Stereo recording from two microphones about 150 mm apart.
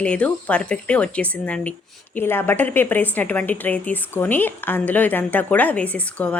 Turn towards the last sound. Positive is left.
turn(degrees=10)  # may be behind; listen again after turning